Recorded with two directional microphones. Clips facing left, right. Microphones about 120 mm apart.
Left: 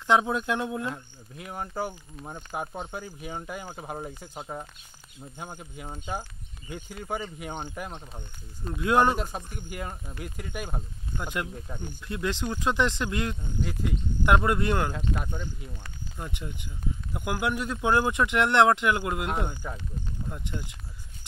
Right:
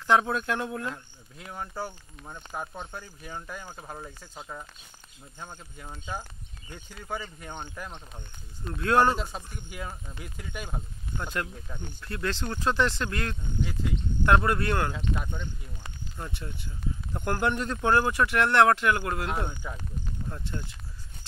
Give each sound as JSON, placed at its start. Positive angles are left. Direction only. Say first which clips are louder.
{"t": 0.0, "sound": "speech", "louder": "even", "side_deg": 20}
{"t": 11.2, "sound": "speech", "louder": "left 1 dB", "side_deg": 15}
{"t": 13.6, "sound": "speech", "louder": "even", "side_deg": 5}
{"t": 14.2, "sound": "speech", "louder": "even", "side_deg": 15}
{"t": 14.9, "sound": "speech", "louder": "left 1 dB", "side_deg": 5}
{"t": 16.2, "sound": "speech", "louder": "left 1 dB", "side_deg": 15}